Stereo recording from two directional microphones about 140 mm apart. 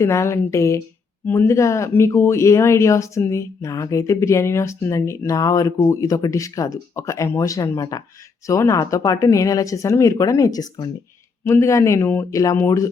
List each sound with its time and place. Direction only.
0.0 s speech: 20° left (ahead or behind)